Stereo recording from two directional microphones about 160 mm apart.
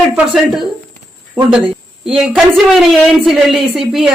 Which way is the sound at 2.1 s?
5° right (ahead or behind).